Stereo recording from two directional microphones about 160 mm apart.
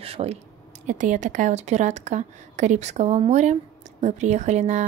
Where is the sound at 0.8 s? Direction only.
50° right (ahead or behind).